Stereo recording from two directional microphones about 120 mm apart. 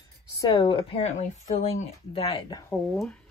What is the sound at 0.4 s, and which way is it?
Speech, 35° left (ahead or behind).